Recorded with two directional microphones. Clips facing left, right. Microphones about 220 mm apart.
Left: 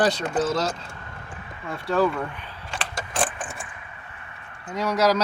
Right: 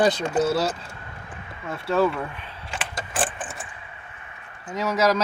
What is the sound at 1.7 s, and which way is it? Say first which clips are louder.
Keys jangling: right 1 dB; centre (ahead or behind).